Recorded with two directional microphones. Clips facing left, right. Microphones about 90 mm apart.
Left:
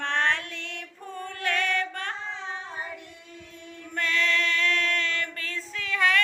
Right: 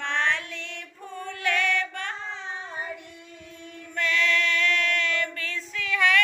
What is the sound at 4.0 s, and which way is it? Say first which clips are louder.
Female singing: right 1 dB; 40° left (ahead or behind).